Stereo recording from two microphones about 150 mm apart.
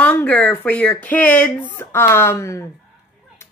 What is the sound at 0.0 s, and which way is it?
Speech, 10° left (ahead or behind).